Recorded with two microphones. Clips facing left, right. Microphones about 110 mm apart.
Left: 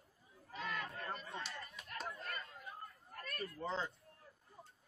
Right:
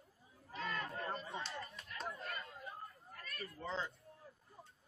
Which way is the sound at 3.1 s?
50° left (ahead or behind).